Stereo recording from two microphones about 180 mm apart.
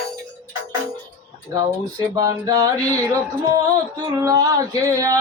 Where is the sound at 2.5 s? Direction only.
20° right (ahead or behind).